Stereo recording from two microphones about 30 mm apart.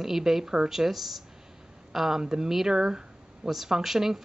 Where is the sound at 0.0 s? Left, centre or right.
Centre.